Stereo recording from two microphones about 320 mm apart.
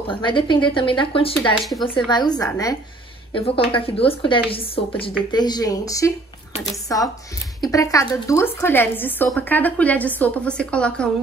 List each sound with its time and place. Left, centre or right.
0.1 s a woman's voice: centre
1.7 s a woman's voice: centre
2.0 s a woman's voice: centre